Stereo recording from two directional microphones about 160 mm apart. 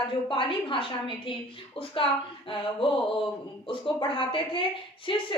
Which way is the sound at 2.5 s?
30° left (ahead or behind).